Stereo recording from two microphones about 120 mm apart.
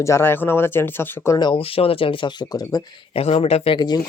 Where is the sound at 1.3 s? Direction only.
45° left (ahead or behind).